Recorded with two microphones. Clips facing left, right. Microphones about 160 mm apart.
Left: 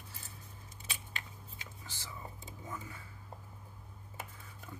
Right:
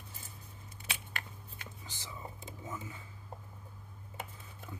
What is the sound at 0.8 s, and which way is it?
Scissors, 65° right (ahead or behind).